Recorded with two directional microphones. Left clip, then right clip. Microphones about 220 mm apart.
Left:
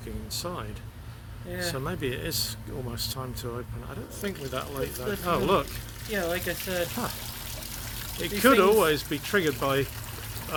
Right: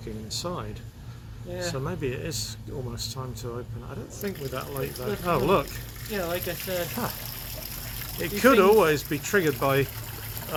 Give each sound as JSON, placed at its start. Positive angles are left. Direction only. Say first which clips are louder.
{"t": 0.3, "sound": "speech", "louder": "right 2 dB", "side_deg": -15}
{"t": 1.7, "sound": "speech", "louder": "even", "side_deg": 10}
{"t": 4.2, "sound": "speech", "louder": "even", "side_deg": 5}
{"t": 6.1, "sound": "speech", "louder": "left 1 dB", "side_deg": 45}
{"t": 8.2, "sound": "speech", "louder": "right 1 dB", "side_deg": 0}